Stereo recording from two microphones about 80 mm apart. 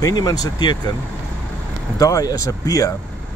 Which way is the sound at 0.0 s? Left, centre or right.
Left.